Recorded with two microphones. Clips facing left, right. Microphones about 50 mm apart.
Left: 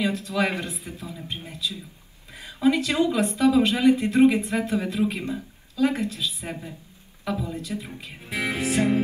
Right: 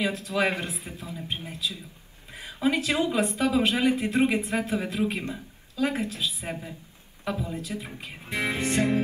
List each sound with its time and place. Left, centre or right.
0.0 s speech: centre
1.4 s music: centre
2.3 s a woman's voice: centre
3.6 s a woman's voice: centre
7.3 s music: centre